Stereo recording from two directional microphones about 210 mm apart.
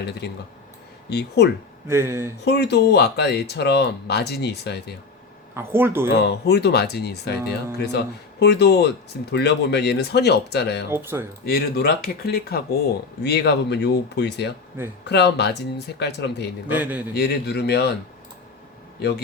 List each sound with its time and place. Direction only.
0.2 s speech: 50° left (ahead or behind)
1.9 s speech: 10° right (ahead or behind)
2.4 s speech: 55° left (ahead or behind)
5.5 s speech: 10° right (ahead or behind)
6.2 s speech: 55° left (ahead or behind)
10.9 s speech: 10° right (ahead or behind)
11.4 s speech: 45° left (ahead or behind)
16.6 s speech: 10° right (ahead or behind)
17.2 s speech: 50° left (ahead or behind)